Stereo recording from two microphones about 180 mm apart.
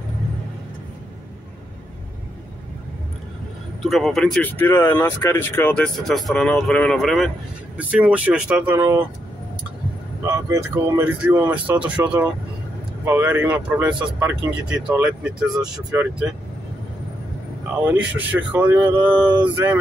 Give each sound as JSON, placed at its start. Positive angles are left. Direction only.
{"t": 3.8, "sound": "speech", "side_deg": 0}
{"t": 10.2, "sound": "speech", "side_deg": -15}
{"t": 15.5, "sound": "speech", "side_deg": -20}
{"t": 17.8, "sound": "speech", "side_deg": -10}